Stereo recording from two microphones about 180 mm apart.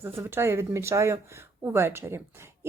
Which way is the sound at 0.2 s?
15° right (ahead or behind).